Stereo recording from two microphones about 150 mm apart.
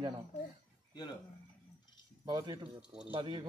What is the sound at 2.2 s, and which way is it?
Speech, 25° right (ahead or behind).